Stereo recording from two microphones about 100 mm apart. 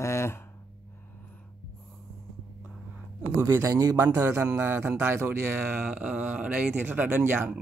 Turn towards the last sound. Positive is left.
turn(degrees=-20)  # may be behind; listen again after turning